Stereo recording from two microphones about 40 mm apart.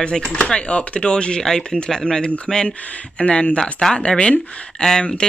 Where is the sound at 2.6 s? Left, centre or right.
Left.